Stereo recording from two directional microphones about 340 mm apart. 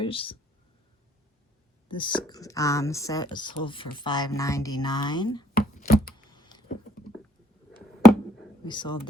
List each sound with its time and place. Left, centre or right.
0.0 s speech: centre
1.9 s speech: centre
5.5 s a sound: left
6.3 s typing: centre
8.6 s speech: centre